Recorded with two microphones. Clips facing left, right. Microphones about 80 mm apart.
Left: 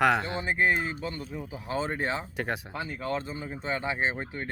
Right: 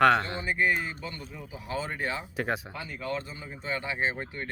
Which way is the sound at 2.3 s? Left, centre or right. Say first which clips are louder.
Right 1 dB; centre.